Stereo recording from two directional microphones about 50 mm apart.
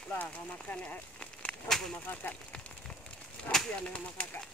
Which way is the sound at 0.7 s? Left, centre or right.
Left.